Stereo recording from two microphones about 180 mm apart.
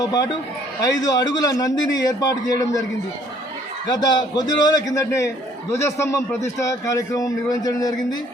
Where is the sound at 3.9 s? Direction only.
20° left (ahead or behind).